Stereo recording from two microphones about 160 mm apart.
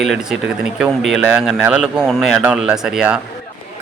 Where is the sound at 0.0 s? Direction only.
Centre (ahead or behind).